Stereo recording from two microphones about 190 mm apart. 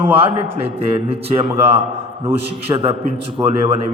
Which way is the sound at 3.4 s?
15° right (ahead or behind).